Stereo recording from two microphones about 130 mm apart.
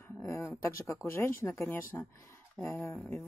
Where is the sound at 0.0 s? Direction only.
15° left (ahead or behind).